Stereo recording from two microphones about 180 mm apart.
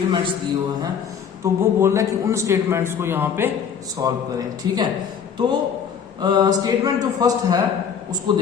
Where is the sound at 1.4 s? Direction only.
15° right (ahead or behind).